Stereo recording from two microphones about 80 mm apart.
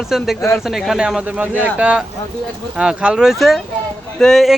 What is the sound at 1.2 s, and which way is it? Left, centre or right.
A man's voice, centre.